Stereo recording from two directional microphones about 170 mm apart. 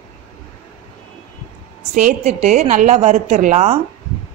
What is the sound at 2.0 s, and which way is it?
A woman's voice, 45° right (ahead or behind).